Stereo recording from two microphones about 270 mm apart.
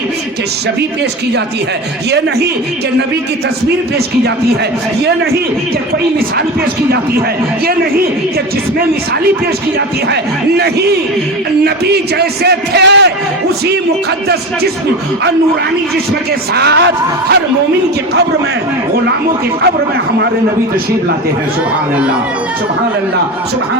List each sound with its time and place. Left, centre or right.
2.0 s a man's voice: right
5.0 s a man's voice: right
10.6 s a man's voice: right
16.6 s a man's voice: right